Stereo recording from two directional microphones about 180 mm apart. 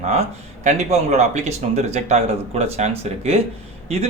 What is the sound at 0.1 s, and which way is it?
Speech, 35° right (ahead or behind).